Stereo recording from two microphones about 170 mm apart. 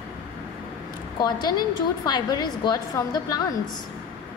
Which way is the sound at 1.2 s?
25° left (ahead or behind).